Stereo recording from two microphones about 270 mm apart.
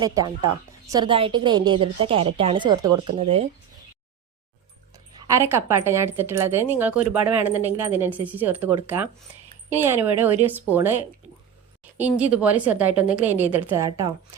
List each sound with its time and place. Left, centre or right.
0.0 s a woman's voice: centre
2.8 s speech: right
3.2 s a woman's voice: right
5.1 s a woman's voice: centre